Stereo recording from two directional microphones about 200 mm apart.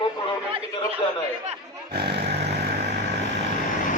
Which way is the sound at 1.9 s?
55° right (ahead or behind).